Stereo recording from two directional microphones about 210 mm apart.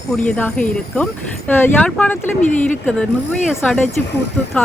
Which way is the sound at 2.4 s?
35° left (ahead or behind).